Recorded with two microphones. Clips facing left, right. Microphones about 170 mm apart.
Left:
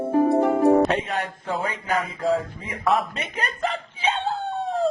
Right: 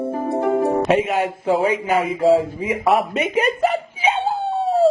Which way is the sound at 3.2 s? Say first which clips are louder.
Right 10 dB; 10° right (ahead or behind).